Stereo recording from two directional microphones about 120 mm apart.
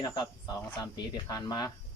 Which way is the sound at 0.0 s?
35° left (ahead or behind).